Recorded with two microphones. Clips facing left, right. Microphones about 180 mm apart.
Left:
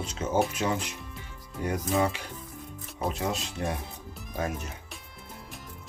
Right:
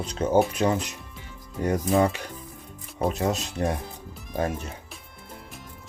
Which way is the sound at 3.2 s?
45° right (ahead or behind).